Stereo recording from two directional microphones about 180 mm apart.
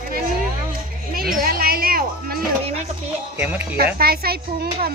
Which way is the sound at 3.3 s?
10° right (ahead or behind).